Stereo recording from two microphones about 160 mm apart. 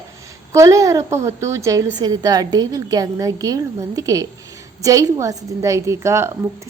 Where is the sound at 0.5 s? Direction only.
20° right (ahead or behind).